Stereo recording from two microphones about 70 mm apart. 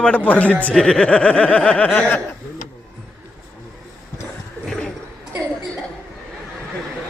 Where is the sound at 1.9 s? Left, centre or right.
Left.